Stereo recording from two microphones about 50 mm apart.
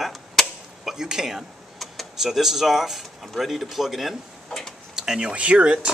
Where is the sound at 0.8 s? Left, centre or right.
Centre.